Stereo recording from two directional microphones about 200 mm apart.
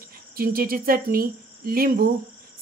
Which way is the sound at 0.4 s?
45° right (ahead or behind).